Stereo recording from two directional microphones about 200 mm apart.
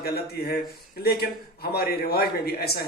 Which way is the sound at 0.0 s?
50° left (ahead or behind).